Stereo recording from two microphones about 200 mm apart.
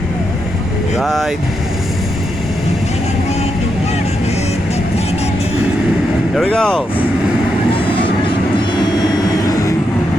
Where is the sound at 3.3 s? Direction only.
35° left (ahead or behind).